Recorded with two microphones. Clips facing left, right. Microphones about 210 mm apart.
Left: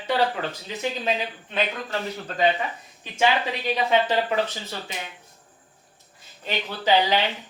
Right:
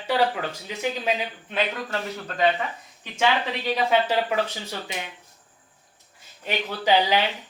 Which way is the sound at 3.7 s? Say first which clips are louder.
Even; 10° right (ahead or behind).